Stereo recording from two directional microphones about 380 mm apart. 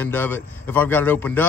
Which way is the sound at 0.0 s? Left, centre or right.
Centre.